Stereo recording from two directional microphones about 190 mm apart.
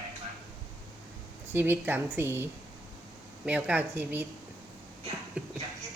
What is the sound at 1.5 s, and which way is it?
Speech, 10° right (ahead or behind).